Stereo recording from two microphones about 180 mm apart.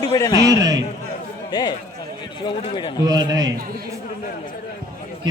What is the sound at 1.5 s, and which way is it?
A man's voice, 25° left (ahead or behind).